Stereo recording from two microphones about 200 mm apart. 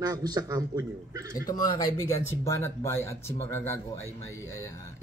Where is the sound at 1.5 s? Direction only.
20° left (ahead or behind).